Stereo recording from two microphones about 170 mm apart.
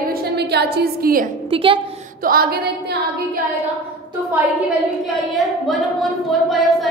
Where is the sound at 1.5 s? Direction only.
30° right (ahead or behind).